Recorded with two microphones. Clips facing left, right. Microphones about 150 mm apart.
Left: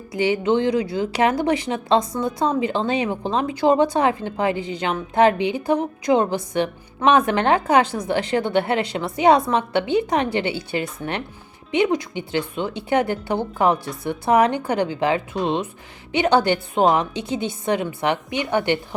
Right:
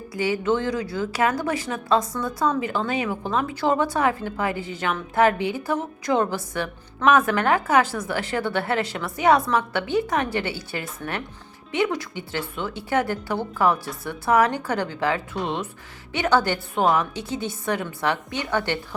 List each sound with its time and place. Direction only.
0.1 s speech: 20° left (ahead or behind)